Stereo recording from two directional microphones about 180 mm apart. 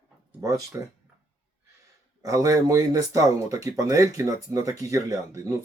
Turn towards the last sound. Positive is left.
turn(degrees=-15)  # may be behind; listen again after turning